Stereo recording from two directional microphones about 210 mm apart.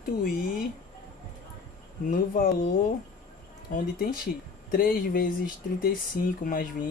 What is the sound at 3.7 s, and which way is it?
Speech, 45° left (ahead or behind).